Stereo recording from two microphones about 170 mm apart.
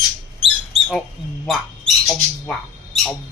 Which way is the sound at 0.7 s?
Centre (ahead or behind).